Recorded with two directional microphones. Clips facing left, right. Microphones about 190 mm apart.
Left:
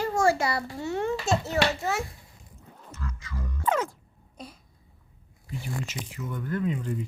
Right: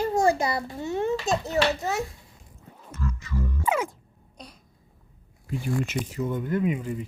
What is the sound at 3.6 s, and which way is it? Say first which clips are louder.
Music: even; 10° right (ahead or behind).